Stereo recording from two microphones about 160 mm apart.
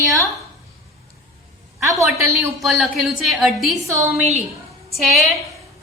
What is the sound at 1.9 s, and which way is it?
Speech, 20° right (ahead or behind).